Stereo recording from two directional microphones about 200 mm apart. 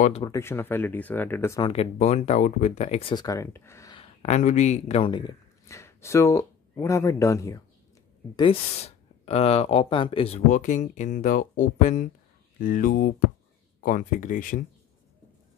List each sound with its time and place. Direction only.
0.2 s speech: 15° left (ahead or behind)
1.6 s speech: 30° left (ahead or behind); by 3.9 s 15° left (ahead or behind)
3.9 s speech: 30° left (ahead or behind); by 7.6 s 15° left (ahead or behind)
8.4 s speech: 30° left (ahead or behind)